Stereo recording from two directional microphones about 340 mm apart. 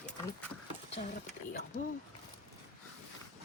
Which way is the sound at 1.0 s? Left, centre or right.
Left.